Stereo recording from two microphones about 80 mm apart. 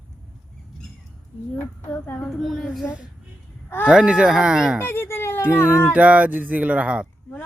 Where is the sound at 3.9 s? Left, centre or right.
Centre.